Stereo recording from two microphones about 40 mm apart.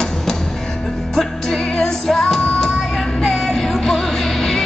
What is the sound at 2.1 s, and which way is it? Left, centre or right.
Music, centre.